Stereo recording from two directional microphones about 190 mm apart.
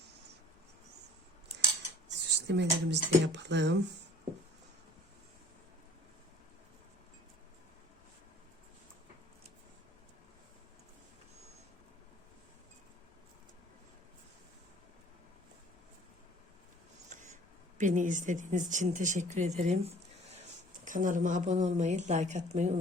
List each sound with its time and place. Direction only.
2.0 s speech: 65° right (ahead or behind)
17.1 s a sound: 40° right (ahead or behind)
17.7 s speech: 40° right (ahead or behind)